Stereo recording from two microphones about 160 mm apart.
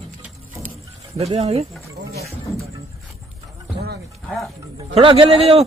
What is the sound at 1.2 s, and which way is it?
Speech, 40° right (ahead or behind).